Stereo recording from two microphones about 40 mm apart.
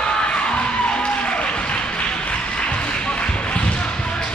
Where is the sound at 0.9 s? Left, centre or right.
Left.